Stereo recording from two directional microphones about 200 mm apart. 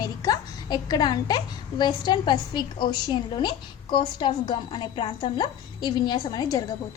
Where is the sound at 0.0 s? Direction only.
20° left (ahead or behind).